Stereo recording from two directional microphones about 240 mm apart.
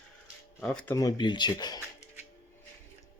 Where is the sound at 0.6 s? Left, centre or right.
Centre.